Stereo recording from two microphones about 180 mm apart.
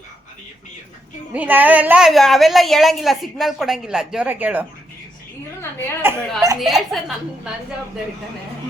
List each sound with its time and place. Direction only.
1.3 s a woman's voice: 10° right (ahead or behind)
6.0 s a woman's voice: 15° right (ahead or behind)
6.6 s a woman's voice: centre (ahead or behind)